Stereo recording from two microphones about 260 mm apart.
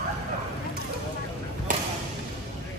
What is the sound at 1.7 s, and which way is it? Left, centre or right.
Basketball bounce, right.